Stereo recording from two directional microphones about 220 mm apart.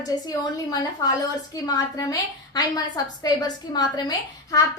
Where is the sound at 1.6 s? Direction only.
15° left (ahead or behind).